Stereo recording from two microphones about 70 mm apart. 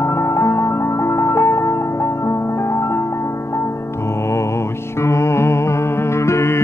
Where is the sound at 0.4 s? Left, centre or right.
Left.